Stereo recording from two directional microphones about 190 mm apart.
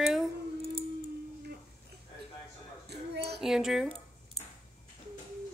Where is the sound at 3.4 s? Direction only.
Centre (ahead or behind).